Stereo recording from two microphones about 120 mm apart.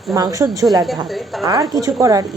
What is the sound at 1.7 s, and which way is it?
Speech, 30° right (ahead or behind).